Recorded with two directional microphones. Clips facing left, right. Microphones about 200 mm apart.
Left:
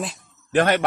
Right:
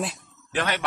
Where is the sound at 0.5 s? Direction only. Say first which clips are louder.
Left 9 dB; 50° left (ahead or behind).